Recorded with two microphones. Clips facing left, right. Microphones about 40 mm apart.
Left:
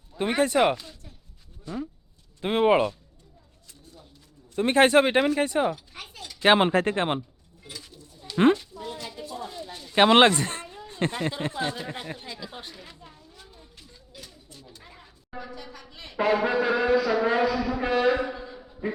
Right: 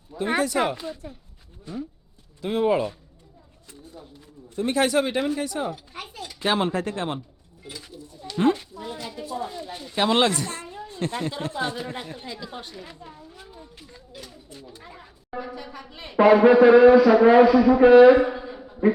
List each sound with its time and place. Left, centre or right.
0.4 s speech: left
0.8 s speech: right
2.4 s speech: left
4.5 s speech: left
5.7 s a sound: centre
6.4 s speech: left
7.6 s bird: centre
8.7 s speech: centre
9.9 s speech: left
10.8 s a sound: left
11.5 s speech: centre
13.1 s a sound: centre
14.7 s speech: centre